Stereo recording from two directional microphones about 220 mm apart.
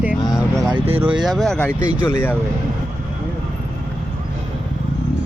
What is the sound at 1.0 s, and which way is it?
Speech, 5° right (ahead or behind).